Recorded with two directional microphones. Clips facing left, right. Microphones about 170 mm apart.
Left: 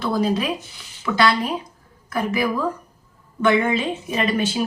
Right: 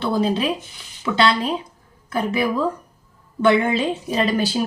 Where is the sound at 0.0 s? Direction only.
25° right (ahead or behind).